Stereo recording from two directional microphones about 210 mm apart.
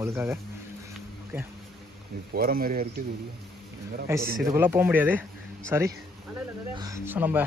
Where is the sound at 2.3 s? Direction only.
45° right (ahead or behind).